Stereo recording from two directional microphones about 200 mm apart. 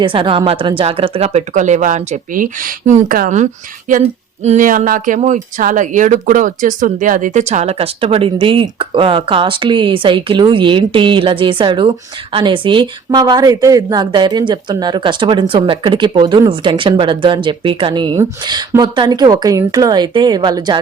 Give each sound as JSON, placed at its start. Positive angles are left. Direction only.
{"t": 0.0, "sound": "speech", "side_deg": -25}